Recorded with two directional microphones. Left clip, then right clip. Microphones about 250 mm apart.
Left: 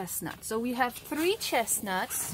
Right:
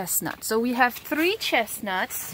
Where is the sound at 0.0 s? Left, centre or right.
Right; by 2.0 s centre.